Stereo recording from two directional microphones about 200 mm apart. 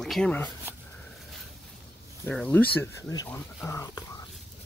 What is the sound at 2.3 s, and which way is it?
Speech, 5° left (ahead or behind).